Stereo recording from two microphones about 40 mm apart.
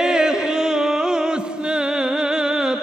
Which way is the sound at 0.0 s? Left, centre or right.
Centre.